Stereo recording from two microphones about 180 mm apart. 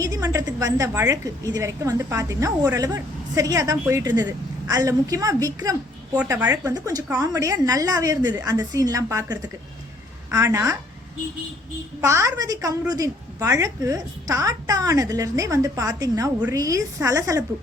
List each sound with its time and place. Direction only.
0.0 s a woman's voice: 20° right (ahead or behind)
11.9 s a woman's voice: 15° right (ahead or behind)